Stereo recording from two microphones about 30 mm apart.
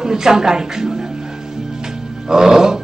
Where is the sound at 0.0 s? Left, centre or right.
Centre.